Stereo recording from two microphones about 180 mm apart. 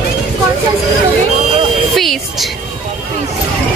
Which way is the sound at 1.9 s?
Centre (ahead or behind).